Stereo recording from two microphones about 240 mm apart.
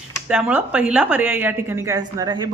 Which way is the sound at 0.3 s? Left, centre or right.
Centre.